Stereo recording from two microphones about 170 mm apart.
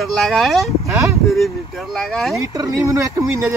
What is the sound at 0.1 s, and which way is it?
Speech, centre (ahead or behind).